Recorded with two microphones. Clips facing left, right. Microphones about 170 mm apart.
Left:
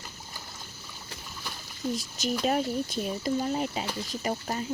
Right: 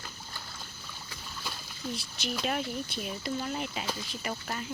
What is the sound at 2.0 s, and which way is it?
Speech, 45° left (ahead or behind).